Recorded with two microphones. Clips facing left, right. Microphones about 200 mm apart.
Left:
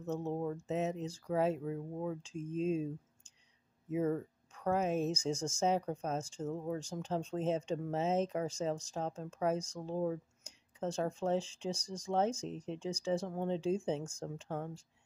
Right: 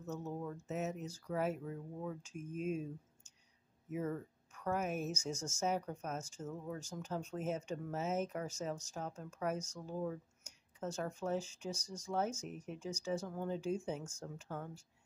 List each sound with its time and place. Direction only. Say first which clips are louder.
0.0 s speech: left 6 dB; 30° left (ahead or behind)